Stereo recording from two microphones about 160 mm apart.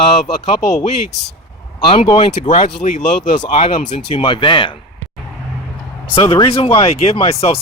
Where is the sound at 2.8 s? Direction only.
50° left (ahead or behind).